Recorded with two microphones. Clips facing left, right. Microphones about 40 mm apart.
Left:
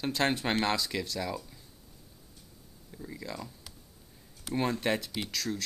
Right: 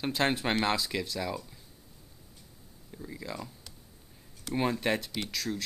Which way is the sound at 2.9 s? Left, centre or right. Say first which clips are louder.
Right 1 dB; centre.